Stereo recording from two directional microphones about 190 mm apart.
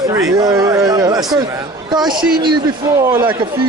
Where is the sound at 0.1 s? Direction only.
20° right (ahead or behind).